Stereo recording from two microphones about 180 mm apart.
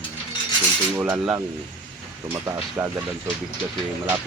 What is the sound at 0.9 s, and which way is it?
Speech, 20° right (ahead or behind).